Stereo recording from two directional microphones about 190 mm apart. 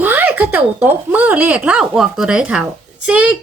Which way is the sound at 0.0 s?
10° right (ahead or behind).